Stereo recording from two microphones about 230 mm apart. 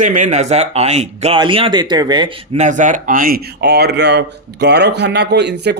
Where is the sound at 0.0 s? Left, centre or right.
Right.